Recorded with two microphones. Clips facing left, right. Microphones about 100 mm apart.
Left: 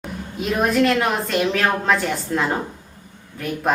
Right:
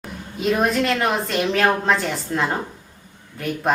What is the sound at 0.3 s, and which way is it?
A woman's voice, centre (ahead or behind).